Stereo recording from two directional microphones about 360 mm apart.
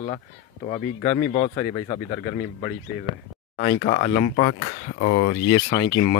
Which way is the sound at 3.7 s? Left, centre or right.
Left.